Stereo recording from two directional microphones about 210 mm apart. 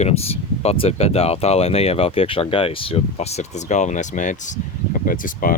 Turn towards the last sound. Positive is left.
turn(degrees=40)  # may be behind; listen again after turning